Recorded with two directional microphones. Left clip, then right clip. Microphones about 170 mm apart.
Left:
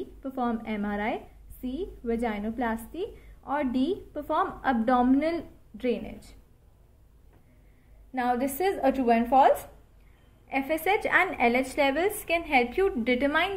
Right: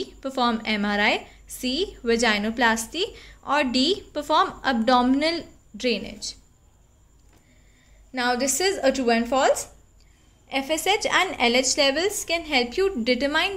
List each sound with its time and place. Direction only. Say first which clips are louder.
0.2 s a woman's voice: right 7 dB; 55° right (ahead or behind)
8.1 s a woman's voice: right 4 dB; 45° right (ahead or behind)